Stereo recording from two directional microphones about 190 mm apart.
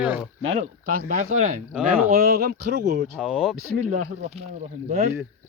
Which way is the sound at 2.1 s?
55° right (ahead or behind).